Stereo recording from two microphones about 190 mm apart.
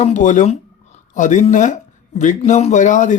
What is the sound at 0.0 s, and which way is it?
Speech, 40° left (ahead or behind).